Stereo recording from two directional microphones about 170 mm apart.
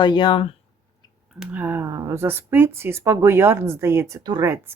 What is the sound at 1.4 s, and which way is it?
Speech, 10° right (ahead or behind).